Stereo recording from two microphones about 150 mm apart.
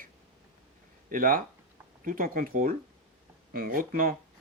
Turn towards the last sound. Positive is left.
turn(degrees=-70)  # may be behind; listen again after turning